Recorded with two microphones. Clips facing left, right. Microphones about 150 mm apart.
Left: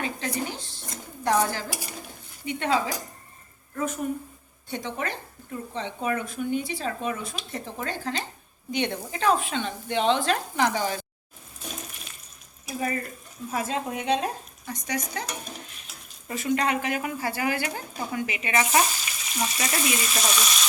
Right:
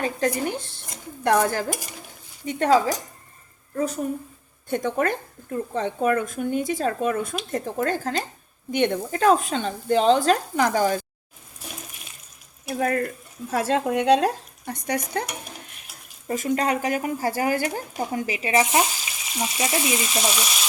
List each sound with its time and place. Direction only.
0.0 s speech: 50° right (ahead or behind)
2.5 s speech: 40° right (ahead or behind)
4.7 s speech: 50° right (ahead or behind)
12.6 s speech: 65° right (ahead or behind)
13.5 s speech: 80° right; by 15.3 s 55° right (ahead or behind)
16.3 s speech: 40° right (ahead or behind)
19.4 s frying: 20° right (ahead or behind)